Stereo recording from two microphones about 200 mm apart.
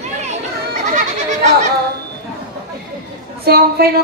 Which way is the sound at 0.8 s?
35° right (ahead or behind).